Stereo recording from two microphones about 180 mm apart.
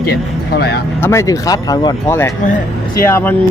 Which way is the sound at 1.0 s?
15° left (ahead or behind).